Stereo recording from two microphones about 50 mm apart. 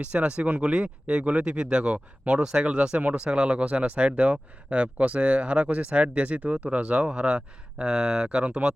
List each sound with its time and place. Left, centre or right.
0.0 s speech: right